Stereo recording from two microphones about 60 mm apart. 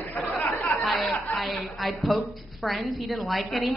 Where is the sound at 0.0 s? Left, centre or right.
Left.